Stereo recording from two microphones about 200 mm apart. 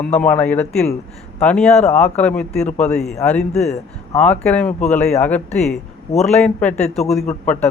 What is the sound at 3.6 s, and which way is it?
Speech, 35° left (ahead or behind).